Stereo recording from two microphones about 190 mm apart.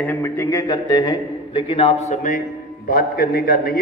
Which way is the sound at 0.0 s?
10° left (ahead or behind).